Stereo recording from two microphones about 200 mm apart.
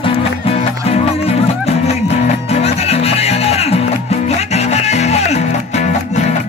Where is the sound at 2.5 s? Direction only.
30° left (ahead or behind).